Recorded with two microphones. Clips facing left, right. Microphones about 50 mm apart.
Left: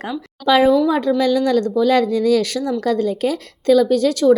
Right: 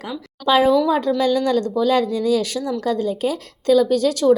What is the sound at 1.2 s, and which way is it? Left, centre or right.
A woman's voice, left.